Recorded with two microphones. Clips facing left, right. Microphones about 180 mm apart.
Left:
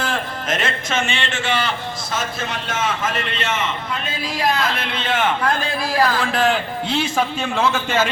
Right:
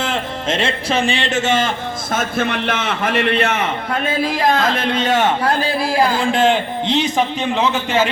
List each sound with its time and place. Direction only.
0.0 s speech: 25° right (ahead or behind); by 1.7 s 45° right (ahead or behind)
2.1 s a man's voice: 60° right (ahead or behind); by 8.1 s 15° right (ahead or behind)